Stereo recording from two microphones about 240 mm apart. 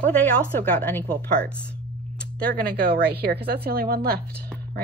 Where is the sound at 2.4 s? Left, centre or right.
Right.